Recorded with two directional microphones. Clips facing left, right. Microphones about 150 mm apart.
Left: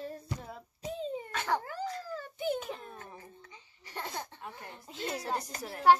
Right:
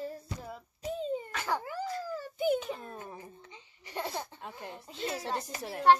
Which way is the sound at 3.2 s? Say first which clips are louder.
Right 3 dB; 20° right (ahead or behind).